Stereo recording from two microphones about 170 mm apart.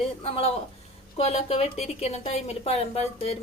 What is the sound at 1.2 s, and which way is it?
A woman's voice, 35° left (ahead or behind).